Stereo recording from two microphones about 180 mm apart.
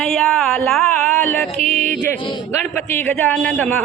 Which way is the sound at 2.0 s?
15° left (ahead or behind).